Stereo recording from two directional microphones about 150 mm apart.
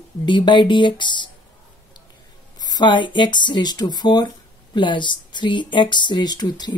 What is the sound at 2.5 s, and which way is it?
Speech, 25° left (ahead or behind).